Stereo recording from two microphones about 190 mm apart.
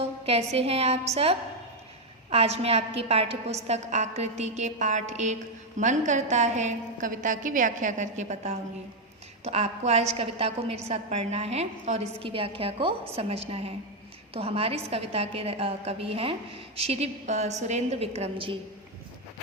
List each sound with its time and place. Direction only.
0.0 s a woman's voice: 30° right (ahead or behind)